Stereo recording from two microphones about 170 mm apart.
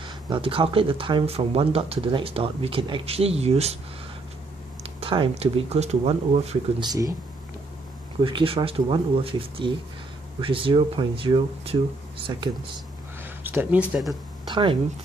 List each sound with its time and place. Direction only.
0.0 s speech: 30° right (ahead or behind)
4.8 s speech: 30° right (ahead or behind)
6.8 s speech: 25° right (ahead or behind)
8.2 s speech: 30° right (ahead or behind)
13.2 s speech: 10° right (ahead or behind)
14.5 s speech: 30° right (ahead or behind)